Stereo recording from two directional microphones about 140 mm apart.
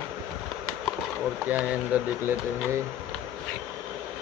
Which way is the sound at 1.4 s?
10° right (ahead or behind).